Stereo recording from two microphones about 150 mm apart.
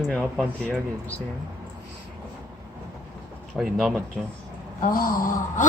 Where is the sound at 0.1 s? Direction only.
5° left (ahead or behind).